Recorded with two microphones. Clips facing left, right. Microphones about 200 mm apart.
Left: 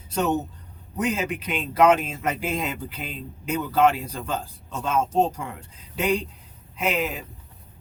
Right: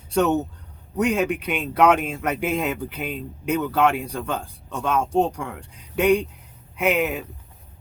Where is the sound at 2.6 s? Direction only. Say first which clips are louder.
Right 4 dB; 60° right (ahead or behind).